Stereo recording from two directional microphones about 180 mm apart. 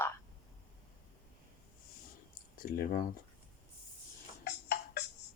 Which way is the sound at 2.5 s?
50° left (ahead or behind).